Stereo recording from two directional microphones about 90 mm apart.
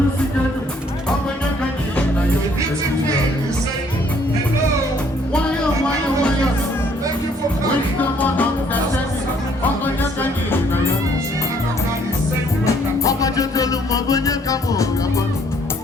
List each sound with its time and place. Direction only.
7.9 s music: 20° left (ahead or behind)
12.6 s music: 40° left (ahead or behind)